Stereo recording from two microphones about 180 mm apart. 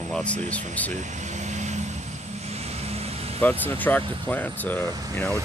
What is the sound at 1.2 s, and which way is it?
Vehicle, 40° right (ahead or behind).